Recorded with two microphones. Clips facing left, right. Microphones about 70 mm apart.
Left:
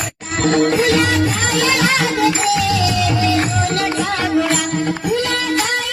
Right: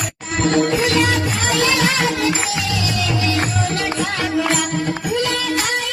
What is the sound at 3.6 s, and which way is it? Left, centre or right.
Music, left.